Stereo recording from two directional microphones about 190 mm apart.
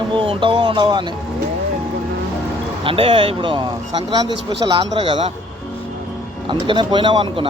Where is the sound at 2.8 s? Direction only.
30° right (ahead or behind).